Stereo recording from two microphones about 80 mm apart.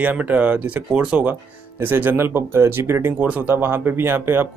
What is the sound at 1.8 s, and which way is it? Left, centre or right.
Speech, right.